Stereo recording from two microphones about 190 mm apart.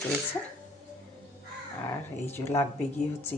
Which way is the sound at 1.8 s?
10° left (ahead or behind).